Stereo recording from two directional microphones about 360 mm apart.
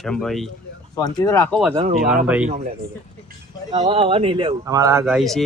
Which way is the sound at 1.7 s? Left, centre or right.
Centre.